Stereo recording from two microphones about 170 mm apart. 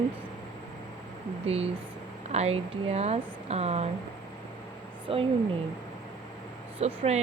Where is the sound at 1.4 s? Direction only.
35° right (ahead or behind).